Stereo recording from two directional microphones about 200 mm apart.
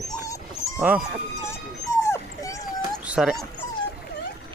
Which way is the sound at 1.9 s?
15° left (ahead or behind).